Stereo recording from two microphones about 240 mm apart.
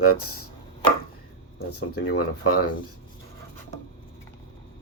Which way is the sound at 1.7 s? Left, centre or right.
Left.